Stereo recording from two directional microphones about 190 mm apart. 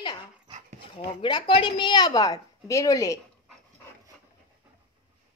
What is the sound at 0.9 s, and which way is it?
A woman's voice, 25° left (ahead or behind).